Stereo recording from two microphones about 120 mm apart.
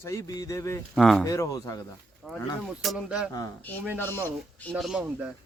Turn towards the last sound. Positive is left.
turn(degrees=-5)  # may be behind; listen again after turning